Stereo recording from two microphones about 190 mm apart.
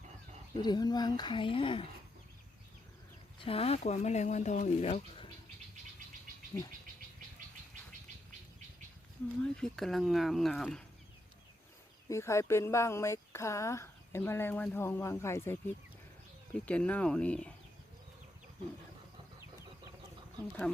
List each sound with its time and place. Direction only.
0.5 s speech: 20° left (ahead or behind)
3.4 s speech: 30° left (ahead or behind)
9.4 s speech: 5° left (ahead or behind)
12.0 s speech: 15° left (ahead or behind)